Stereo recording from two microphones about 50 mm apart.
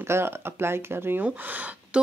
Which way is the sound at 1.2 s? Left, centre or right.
Right.